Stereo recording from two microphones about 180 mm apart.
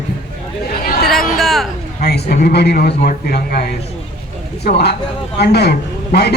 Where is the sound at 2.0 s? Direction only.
65° left (ahead or behind).